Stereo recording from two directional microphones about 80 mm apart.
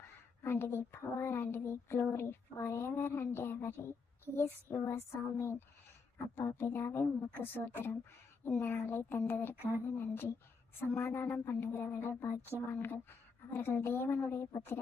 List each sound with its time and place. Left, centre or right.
0.4 s a woman's voice: left